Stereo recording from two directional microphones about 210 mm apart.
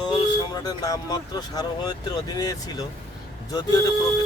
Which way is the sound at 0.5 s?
20° left (ahead or behind).